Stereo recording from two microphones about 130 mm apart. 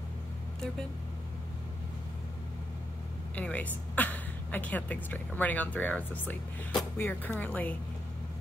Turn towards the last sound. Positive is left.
turn(degrees=10)  # may be behind; listen again after turning